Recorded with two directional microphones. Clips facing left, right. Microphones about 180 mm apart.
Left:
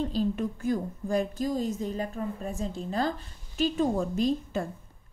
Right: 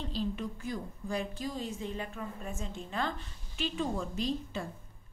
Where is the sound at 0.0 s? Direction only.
45° left (ahead or behind).